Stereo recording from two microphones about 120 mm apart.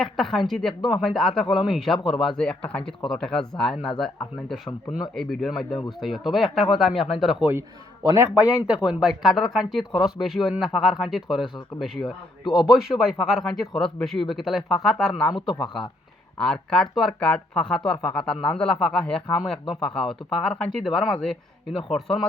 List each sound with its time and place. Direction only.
0.0 s speech: 5° left (ahead or behind)
0.7 s a man's voice: 40° left (ahead or behind)
1.0 s speech: 5° left (ahead or behind)
8.0 s speech: 25° right (ahead or behind)
8.4 s speech: 10° right (ahead or behind)
15.3 s a man's voice: 40° left (ahead or behind)
16.4 s speech: 5° left (ahead or behind)